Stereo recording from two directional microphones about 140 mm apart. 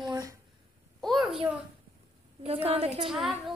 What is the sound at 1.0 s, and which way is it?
Speech, centre (ahead or behind).